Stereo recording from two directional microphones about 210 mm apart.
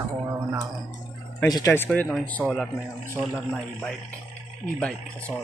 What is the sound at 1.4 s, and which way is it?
A man's voice, 15° left (ahead or behind).